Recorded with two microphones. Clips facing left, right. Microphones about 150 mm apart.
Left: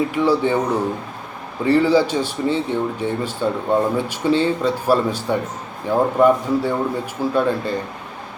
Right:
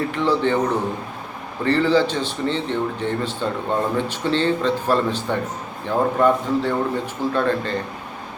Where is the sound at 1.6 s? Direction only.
10° left (ahead or behind).